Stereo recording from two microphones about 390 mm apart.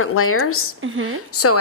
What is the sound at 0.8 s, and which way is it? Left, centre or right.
Speech, right.